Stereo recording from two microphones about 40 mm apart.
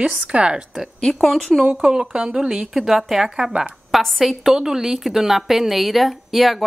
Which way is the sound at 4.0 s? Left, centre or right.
Centre.